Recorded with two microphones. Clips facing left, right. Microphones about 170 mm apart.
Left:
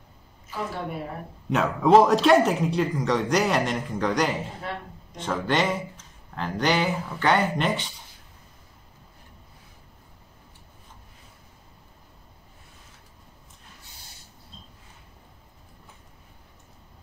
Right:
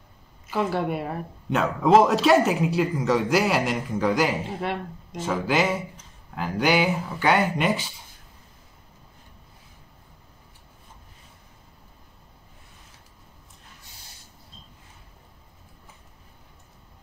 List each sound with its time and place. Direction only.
0.5 s a woman's voice: 85° right
1.5 s speech: centre (ahead or behind)